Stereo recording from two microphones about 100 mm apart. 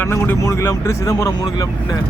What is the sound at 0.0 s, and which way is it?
Speech, 20° left (ahead or behind).